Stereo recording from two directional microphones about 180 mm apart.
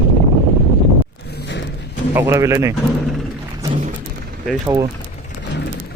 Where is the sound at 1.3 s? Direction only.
70° left (ahead or behind).